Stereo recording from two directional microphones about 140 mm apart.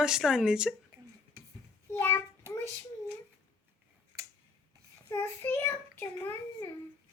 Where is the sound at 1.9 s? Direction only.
15° left (ahead or behind).